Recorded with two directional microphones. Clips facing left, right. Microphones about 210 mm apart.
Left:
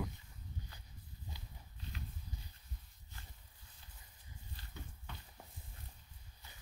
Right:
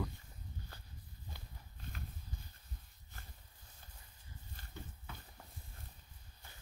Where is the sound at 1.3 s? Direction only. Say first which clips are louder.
Right 2 dB; 50° right (ahead or behind).